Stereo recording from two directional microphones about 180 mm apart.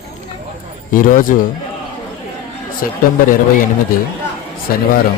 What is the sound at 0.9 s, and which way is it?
Speech, 50° left (ahead or behind).